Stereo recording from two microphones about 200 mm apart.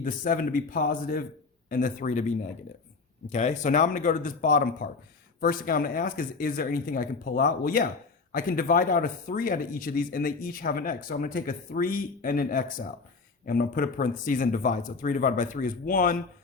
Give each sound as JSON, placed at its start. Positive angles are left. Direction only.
{"t": 0.0, "sound": "speech", "side_deg": 45}